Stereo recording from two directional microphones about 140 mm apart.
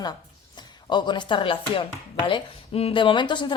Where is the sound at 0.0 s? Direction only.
30° left (ahead or behind).